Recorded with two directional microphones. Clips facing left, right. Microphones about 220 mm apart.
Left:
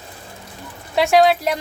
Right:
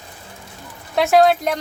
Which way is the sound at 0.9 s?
Centre (ahead or behind).